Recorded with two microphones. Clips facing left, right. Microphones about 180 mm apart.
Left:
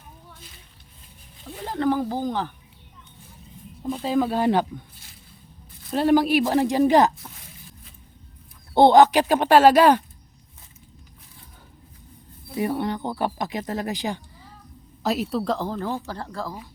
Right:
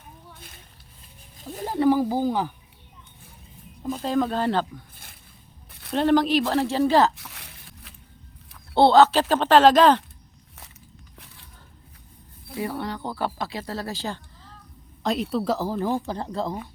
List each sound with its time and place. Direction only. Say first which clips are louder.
1.6 s speech: right 3 dB; 10° right (ahead or behind)
3.8 s speech: left 1 dB; centre (ahead or behind)
5.9 s speech: left 1 dB; 10° left (ahead or behind)
7.2 s a sound: left 1 dB; 75° right (ahead or behind)
8.7 s speech: left 2 dB; 15° left (ahead or behind)
12.5 s speech: left 4 dB; 20° left (ahead or behind)
15.0 s speech: even; 5° left (ahead or behind); by 16.6 s 20° right (ahead or behind)